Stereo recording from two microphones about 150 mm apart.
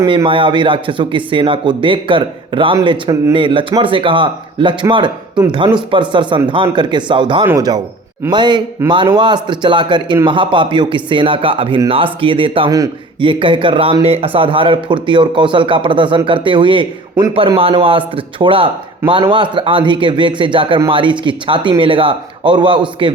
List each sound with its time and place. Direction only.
0.0 s a man's voice: 30° right (ahead or behind)